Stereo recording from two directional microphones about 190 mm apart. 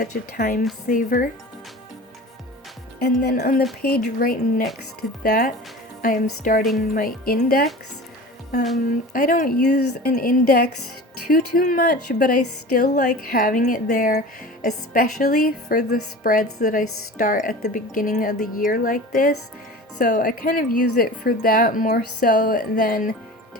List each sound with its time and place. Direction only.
0.0 s a woman's voice: 45° left (ahead or behind)
3.2 s a woman's voice: 55° left (ahead or behind)
9.1 s a woman's voice: 45° left (ahead or behind)